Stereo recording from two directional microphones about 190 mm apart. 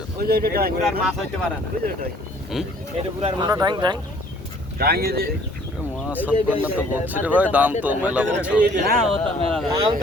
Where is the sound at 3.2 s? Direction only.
25° right (ahead or behind).